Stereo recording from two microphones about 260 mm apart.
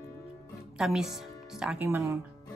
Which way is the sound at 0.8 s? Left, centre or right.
Centre.